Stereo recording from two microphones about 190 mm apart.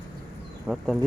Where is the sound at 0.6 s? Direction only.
Centre (ahead or behind).